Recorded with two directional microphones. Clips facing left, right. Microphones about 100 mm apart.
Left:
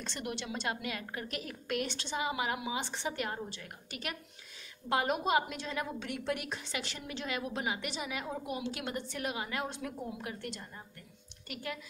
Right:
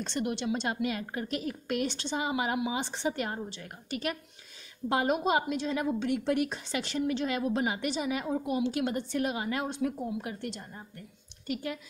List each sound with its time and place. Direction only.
0.0 s a woman's voice: 25° right (ahead or behind)